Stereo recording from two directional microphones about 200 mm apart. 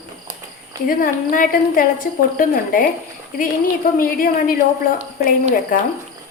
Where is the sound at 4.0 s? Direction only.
45° left (ahead or behind).